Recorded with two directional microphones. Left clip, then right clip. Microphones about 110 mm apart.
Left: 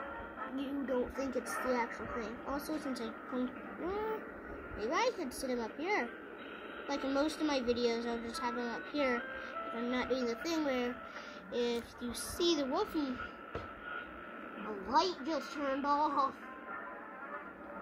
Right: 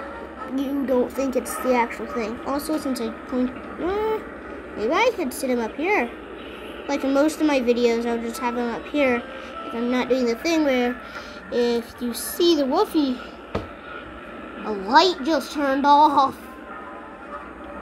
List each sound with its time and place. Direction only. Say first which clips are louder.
0.6 s a woman's voice: right 15 dB; 5° left (ahead or behind)
14.6 s a woman's voice: right 15 dB; 15° right (ahead or behind)